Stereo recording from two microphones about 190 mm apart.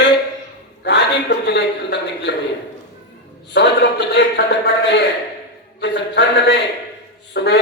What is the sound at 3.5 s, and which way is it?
A man's voice, 65° left (ahead or behind).